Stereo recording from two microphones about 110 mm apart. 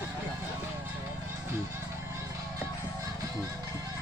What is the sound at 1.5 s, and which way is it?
Music, 25° right (ahead or behind).